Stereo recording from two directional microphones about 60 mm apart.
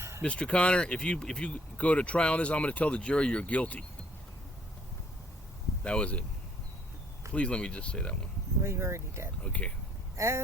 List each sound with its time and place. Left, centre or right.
0.2 s speech: centre
5.8 s speech: centre
7.3 s speech: centre
8.6 s speech: right
9.4 s speech: left
10.2 s speech: right